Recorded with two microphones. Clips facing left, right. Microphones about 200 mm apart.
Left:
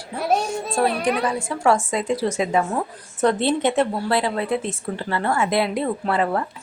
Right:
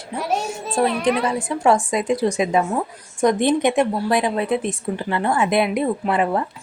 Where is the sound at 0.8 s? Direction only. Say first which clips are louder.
Right 2 dB; 20° right (ahead or behind).